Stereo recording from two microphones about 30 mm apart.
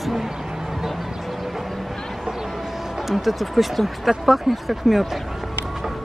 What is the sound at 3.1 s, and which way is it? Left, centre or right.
Speech, centre.